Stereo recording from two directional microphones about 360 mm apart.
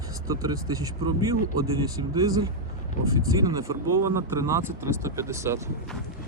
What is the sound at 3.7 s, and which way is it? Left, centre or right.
Speech, right.